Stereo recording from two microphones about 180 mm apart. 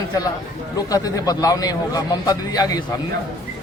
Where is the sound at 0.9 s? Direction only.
20° left (ahead or behind).